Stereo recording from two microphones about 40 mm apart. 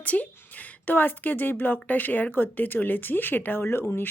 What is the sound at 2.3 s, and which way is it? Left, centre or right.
A woman's voice, left.